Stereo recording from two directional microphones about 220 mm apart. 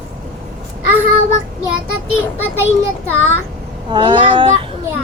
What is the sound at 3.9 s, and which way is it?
Speech, 20° right (ahead or behind).